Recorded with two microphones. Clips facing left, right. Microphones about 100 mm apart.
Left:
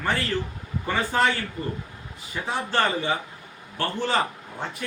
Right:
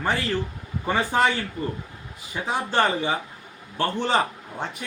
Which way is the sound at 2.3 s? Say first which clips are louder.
Right 1 dB; 15° right (ahead or behind).